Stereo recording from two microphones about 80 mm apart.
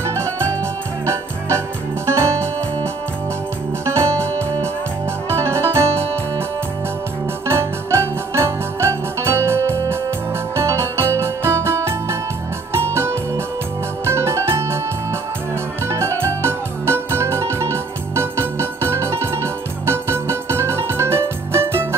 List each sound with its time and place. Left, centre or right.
0.0 s music: right
2.0 s music: right
3.8 s music: right
7.4 s music: right
14.0 s organ: right
15.9 s music: right